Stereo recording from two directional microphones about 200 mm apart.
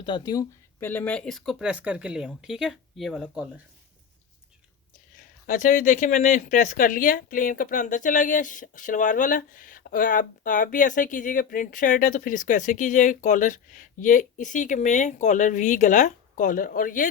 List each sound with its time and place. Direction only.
0.0 s speech: 20° left (ahead or behind); by 3.5 s 5° right (ahead or behind)
5.5 s a woman's voice: 40° left (ahead or behind)